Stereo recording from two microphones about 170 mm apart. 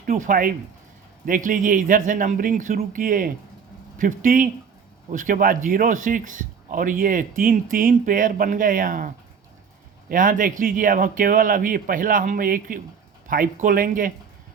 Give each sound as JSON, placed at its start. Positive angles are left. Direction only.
{"t": 0.0, "sound": "speech", "side_deg": -55}
{"t": 10.1, "sound": "speech", "side_deg": -50}